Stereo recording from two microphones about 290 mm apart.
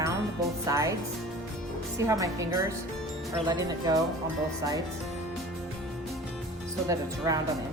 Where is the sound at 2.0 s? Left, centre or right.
Centre.